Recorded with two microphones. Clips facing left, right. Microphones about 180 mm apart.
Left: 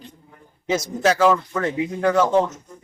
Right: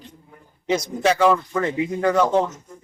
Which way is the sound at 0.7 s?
5° left (ahead or behind).